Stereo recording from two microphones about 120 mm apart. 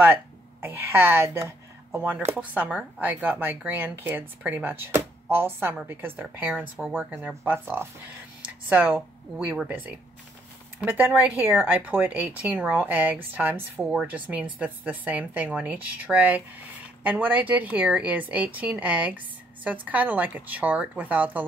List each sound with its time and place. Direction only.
0.0 s a woman's voice: 15° right (ahead or behind)